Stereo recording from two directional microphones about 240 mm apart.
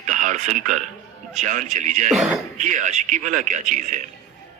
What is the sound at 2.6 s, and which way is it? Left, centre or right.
A man's voice, right.